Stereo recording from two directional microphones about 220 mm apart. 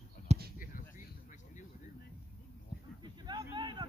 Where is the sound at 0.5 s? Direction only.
35° left (ahead or behind).